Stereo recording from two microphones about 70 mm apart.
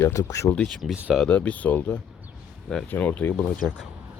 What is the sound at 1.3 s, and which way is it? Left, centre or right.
Speech, centre.